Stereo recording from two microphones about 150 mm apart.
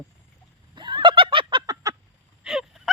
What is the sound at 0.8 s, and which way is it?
Fowl, 30° right (ahead or behind).